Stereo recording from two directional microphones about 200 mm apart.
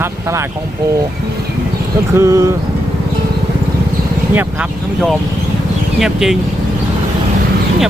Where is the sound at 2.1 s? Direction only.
15° right (ahead or behind).